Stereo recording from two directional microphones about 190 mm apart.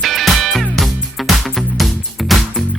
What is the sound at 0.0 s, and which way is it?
Music, centre (ahead or behind).